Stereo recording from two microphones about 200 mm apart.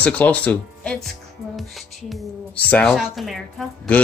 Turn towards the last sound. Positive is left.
turn(degrees=0)  # may be behind; listen again after turning